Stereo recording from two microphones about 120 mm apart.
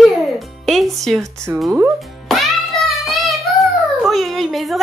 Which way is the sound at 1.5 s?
20° right (ahead or behind).